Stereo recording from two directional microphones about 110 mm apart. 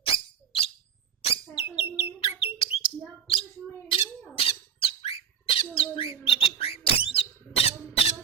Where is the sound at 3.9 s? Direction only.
55° left (ahead or behind).